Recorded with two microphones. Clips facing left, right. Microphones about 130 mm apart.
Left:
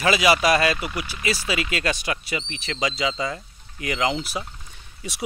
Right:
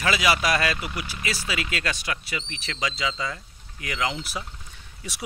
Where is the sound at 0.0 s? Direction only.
15° left (ahead or behind).